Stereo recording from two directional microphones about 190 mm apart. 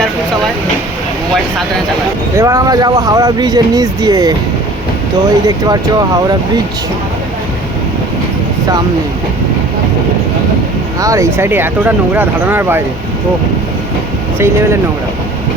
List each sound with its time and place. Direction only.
2.3 s speech: 15° right (ahead or behind)
5.5 s speech: 20° right (ahead or behind)
11.0 s speech: 15° right (ahead or behind)
14.3 s speech: 15° right (ahead or behind)